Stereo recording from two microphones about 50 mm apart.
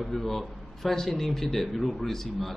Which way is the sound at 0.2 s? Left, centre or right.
Centre.